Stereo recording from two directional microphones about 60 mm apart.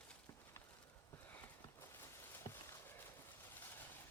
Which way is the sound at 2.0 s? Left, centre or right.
Left.